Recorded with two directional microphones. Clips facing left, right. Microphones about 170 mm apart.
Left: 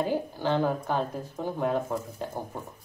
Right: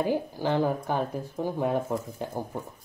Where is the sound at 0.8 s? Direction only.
15° right (ahead or behind).